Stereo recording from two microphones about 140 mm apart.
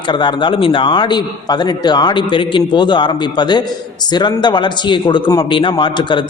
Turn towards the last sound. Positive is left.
turn(degrees=35)  # may be behind; listen again after turning